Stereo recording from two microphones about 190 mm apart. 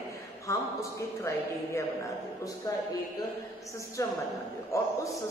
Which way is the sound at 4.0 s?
15° left (ahead or behind).